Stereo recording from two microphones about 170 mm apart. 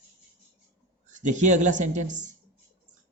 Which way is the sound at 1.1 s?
45° right (ahead or behind).